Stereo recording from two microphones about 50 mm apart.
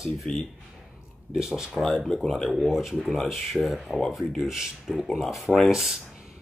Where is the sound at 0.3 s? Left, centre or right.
Centre.